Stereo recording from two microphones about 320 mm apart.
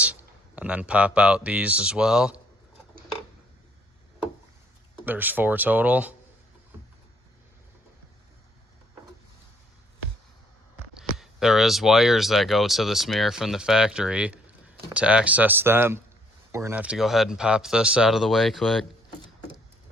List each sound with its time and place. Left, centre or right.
0.0 s speech: centre
5.0 s speech: centre
11.2 s speech: centre